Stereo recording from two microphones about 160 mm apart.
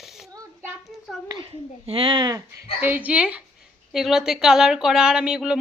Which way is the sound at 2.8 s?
10° right (ahead or behind).